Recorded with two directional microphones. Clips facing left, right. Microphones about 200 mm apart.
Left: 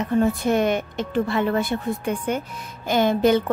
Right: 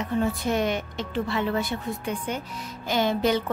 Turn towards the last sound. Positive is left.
turn(degrees=50)  # may be behind; listen again after turning